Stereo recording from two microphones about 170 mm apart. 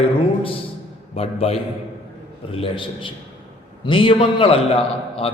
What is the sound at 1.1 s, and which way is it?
Mantra, 35° left (ahead or behind).